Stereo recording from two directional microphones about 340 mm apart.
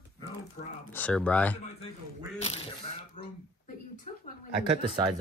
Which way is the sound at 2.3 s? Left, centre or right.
Centre.